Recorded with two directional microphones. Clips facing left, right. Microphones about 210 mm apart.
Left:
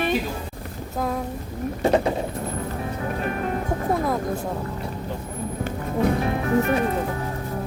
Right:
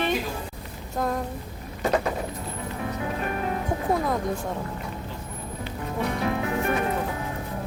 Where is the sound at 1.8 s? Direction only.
25° left (ahead or behind).